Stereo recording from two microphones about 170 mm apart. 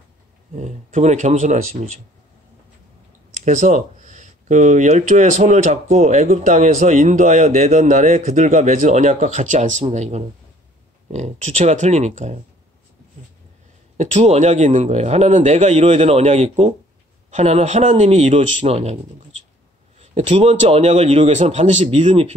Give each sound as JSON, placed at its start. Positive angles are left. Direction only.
{"t": 0.6, "sound": "speech", "side_deg": -45}
{"t": 3.4, "sound": "speech", "side_deg": -45}
{"t": 13.9, "sound": "a man's voice", "side_deg": -40}
{"t": 20.0, "sound": "a man's voice", "side_deg": -40}